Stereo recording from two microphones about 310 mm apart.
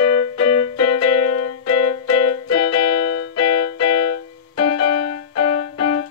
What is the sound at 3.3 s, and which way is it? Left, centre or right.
Music, left.